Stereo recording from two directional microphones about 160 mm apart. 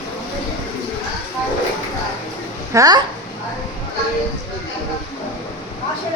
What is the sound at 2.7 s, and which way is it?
Speech, 20° right (ahead or behind).